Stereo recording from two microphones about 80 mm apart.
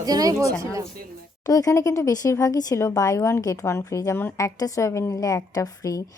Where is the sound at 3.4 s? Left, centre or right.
Left.